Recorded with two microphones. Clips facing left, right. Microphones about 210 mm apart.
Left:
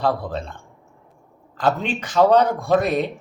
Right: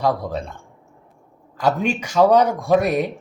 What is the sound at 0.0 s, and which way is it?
A man's voice, 15° right (ahead or behind).